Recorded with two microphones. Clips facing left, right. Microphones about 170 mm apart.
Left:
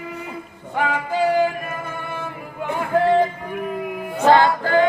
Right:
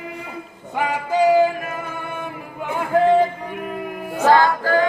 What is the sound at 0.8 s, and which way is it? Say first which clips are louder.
Music: right 2 dB; 20° right (ahead or behind).